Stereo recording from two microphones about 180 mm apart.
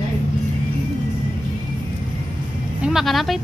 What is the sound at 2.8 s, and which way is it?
Speech, centre (ahead or behind).